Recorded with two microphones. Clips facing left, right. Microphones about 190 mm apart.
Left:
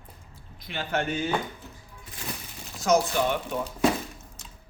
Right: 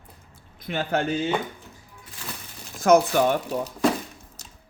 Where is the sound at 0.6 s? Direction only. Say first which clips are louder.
Right 4 dB; 45° right (ahead or behind).